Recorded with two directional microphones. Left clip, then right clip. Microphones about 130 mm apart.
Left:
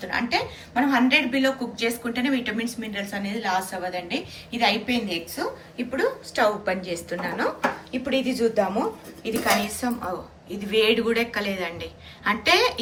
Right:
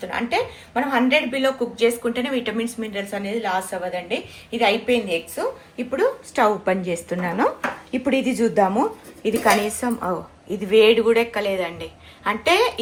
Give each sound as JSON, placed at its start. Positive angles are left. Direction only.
{"t": 0.1, "sound": "a woman's voice", "side_deg": -20}
{"t": 8.0, "sound": "a woman's voice", "side_deg": -65}
{"t": 9.2, "sound": "a woman's voice", "side_deg": -50}
{"t": 10.7, "sound": "a woman's voice", "side_deg": -30}